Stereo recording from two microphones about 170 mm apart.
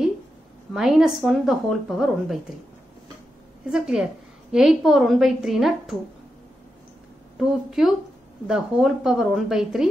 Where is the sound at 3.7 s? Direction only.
5° right (ahead or behind).